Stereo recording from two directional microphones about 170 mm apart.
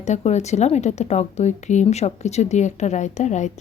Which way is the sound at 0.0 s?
40° left (ahead or behind).